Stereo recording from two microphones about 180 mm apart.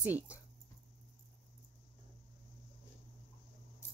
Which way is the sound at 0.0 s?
10° right (ahead or behind).